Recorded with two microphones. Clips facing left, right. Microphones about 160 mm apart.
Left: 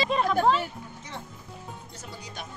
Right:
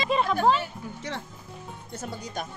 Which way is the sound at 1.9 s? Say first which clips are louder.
Right 7 dB; 50° right (ahead or behind).